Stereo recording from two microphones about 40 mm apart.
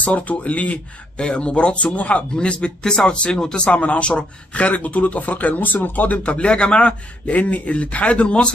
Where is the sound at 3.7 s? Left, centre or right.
Left.